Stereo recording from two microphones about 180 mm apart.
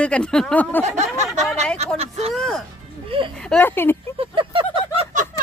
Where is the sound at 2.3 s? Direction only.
5° left (ahead or behind).